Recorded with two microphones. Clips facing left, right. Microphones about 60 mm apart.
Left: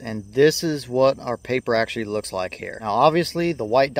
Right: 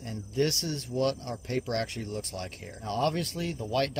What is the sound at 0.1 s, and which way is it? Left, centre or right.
Speech, left.